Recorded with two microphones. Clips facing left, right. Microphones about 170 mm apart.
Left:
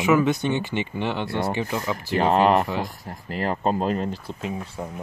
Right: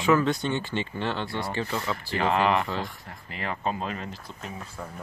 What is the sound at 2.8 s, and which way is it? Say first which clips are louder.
Speech: left 6 dB; 40° left (ahead or behind).